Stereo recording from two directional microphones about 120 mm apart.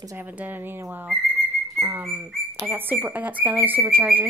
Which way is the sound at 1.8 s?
20° right (ahead or behind).